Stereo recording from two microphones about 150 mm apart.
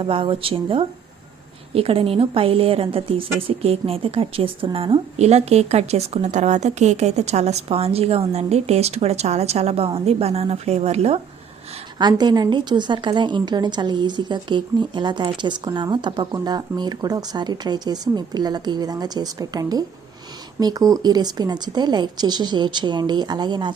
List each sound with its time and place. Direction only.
0.0 s a woman's voice: 35° right (ahead or behind)
11.9 s a woman's voice: 30° right (ahead or behind)